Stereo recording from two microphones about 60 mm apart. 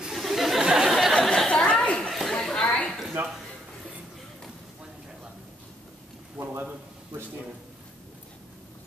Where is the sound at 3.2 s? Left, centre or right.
Right.